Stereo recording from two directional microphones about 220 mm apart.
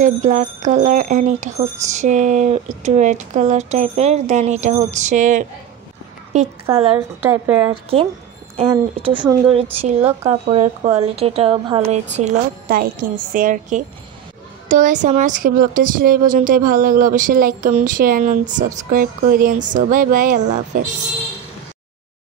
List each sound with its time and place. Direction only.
0.0 s a woman's voice: 35° right (ahead or behind)
7.2 s speech: 10° right (ahead or behind)
7.7 s speech: 25° right (ahead or behind)